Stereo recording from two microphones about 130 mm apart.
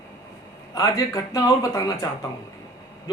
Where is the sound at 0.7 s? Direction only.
25° left (ahead or behind).